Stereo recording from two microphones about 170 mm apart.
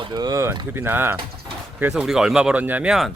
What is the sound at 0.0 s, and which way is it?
Speech, 25° right (ahead or behind).